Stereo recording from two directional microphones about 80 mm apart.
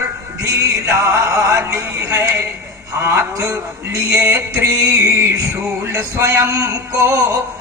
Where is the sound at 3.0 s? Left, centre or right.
Right.